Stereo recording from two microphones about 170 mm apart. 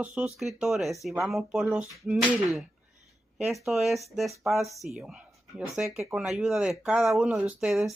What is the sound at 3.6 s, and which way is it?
Speech, centre (ahead or behind).